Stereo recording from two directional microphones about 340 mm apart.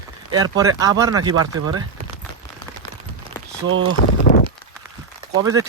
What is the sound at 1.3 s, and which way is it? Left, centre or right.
Speech, right.